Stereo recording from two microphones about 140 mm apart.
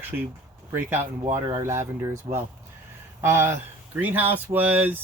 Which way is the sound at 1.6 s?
15° right (ahead or behind).